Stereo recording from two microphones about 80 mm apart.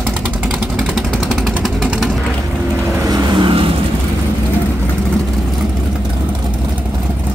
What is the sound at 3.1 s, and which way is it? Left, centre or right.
Vehicle, right.